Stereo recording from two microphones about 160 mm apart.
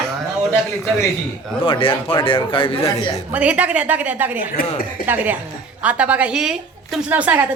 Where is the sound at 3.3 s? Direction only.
10° right (ahead or behind).